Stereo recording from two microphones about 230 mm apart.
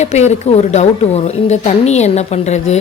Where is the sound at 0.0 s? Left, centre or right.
Left.